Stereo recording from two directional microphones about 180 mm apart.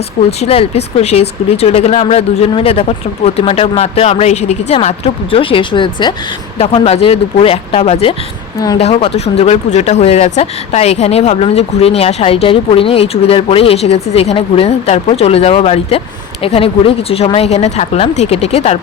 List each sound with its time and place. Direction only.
0.3 s speech: 30° left (ahead or behind)